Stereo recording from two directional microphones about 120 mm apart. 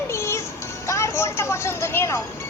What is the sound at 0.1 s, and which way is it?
Music, 20° left (ahead or behind).